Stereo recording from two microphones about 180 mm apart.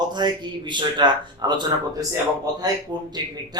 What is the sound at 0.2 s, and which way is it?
Speech, 25° right (ahead or behind).